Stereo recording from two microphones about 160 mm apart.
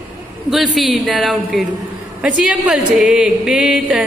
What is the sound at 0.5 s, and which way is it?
A woman's voice, centre (ahead or behind).